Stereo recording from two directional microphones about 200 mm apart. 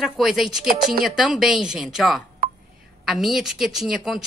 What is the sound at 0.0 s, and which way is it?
Speech, centre (ahead or behind).